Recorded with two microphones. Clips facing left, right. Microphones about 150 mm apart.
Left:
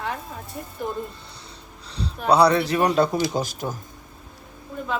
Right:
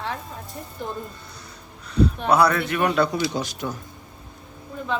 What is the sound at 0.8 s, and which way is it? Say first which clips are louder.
Speech: left 3 dB; 10° left (ahead or behind).